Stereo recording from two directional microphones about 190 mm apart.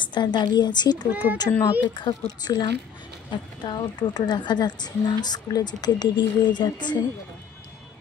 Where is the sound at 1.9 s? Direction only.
25° left (ahead or behind).